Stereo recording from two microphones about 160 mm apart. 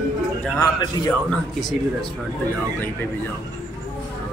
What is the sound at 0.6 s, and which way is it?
Speech, 25° left (ahead or behind).